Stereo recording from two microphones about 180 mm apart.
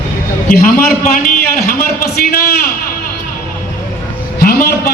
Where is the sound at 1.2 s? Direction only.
50° left (ahead or behind).